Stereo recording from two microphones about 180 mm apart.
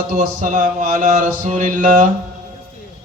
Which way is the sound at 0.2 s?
45° right (ahead or behind).